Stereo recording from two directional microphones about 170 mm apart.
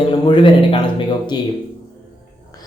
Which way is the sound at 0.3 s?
30° left (ahead or behind).